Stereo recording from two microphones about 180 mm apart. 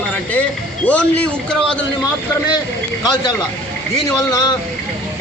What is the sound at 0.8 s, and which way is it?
Speech, 5° left (ahead or behind).